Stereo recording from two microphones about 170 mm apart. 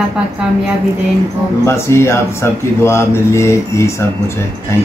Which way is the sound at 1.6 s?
15° left (ahead or behind).